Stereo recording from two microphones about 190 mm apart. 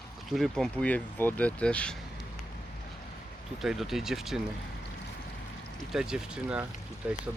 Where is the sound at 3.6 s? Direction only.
Centre (ahead or behind).